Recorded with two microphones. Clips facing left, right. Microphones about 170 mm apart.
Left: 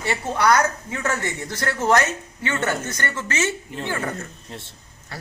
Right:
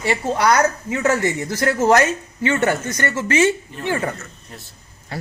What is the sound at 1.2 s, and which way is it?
Speech, 10° right (ahead or behind).